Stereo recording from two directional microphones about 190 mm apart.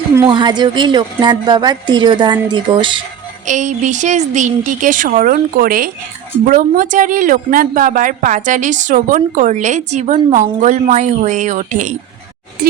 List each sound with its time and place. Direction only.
0.3 s a woman's voice: 25° right (ahead or behind)
3.4 s a woman's voice: 40° right (ahead or behind)